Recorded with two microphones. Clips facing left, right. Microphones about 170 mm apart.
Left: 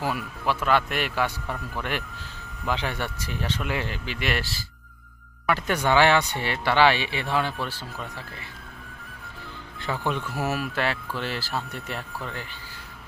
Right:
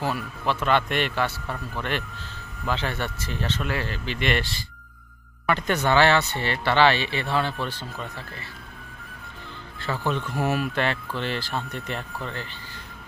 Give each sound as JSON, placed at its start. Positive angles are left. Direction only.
{"t": 0.0, "sound": "speech", "side_deg": 10}
{"t": 9.8, "sound": "speech", "side_deg": 15}